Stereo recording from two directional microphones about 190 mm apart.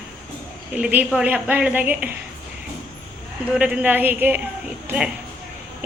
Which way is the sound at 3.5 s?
5° right (ahead or behind).